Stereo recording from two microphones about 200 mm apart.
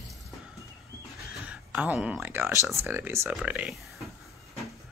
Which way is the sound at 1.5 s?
5° right (ahead or behind).